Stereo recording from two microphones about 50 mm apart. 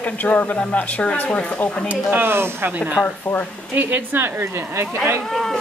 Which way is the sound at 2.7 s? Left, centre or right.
Right.